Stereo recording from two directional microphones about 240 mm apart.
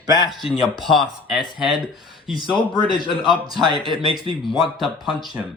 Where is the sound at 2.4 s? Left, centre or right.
Left.